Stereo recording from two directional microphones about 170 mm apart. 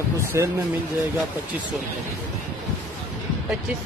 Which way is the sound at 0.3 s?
20° right (ahead or behind).